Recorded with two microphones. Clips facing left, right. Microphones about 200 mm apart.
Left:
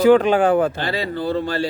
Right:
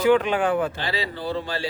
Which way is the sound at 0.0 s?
40° left (ahead or behind).